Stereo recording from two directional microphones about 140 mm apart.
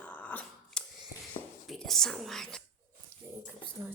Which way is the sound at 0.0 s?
10° left (ahead or behind).